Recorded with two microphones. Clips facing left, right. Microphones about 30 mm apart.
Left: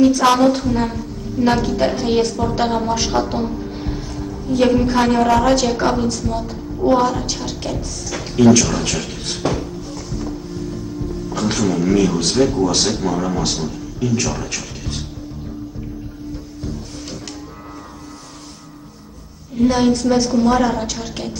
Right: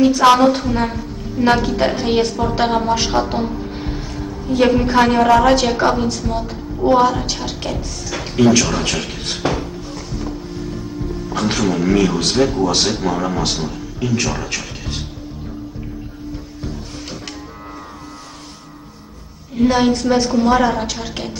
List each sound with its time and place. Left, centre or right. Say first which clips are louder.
0.0 s a woman's voice: right 2 dB; centre
19.5 s a woman's voice: right 1 dB; centre